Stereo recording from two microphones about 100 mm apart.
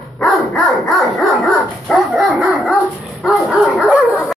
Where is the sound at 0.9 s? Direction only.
Centre (ahead or behind).